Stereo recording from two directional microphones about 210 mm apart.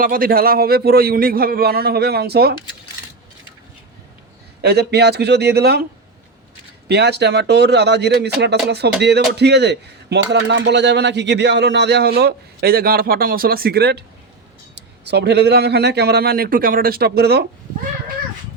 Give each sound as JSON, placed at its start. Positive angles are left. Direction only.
{"t": 0.0, "sound": "a man's voice", "side_deg": -45}
{"t": 4.6, "sound": "a man's voice", "side_deg": -50}
{"t": 6.8, "sound": "a man's voice", "side_deg": -50}